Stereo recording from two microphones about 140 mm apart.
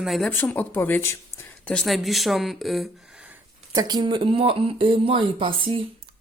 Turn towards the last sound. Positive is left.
turn(degrees=-40)  # may be behind; listen again after turning